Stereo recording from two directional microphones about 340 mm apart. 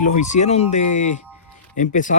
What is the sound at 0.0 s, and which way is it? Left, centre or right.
Speech, left.